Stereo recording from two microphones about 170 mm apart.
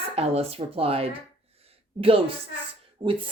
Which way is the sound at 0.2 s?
35° right (ahead or behind).